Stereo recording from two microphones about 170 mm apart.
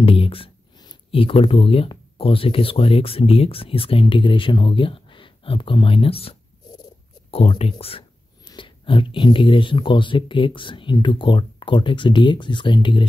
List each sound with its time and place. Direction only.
0.0 s speech: 35° left (ahead or behind)